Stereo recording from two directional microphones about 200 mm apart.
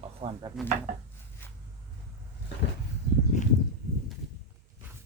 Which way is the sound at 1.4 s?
10° left (ahead or behind).